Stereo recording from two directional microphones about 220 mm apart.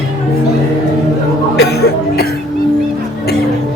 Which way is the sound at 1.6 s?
45° left (ahead or behind).